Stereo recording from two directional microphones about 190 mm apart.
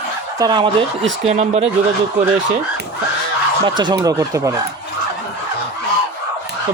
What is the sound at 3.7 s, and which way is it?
Speech, 25° right (ahead or behind).